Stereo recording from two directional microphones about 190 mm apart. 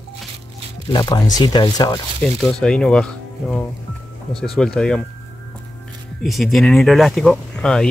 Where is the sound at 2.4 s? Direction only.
5° left (ahead or behind).